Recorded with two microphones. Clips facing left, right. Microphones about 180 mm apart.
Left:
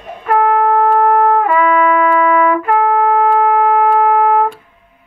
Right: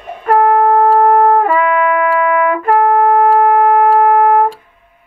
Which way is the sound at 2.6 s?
45° right (ahead or behind).